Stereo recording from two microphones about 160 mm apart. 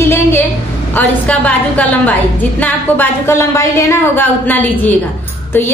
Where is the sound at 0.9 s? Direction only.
10° left (ahead or behind).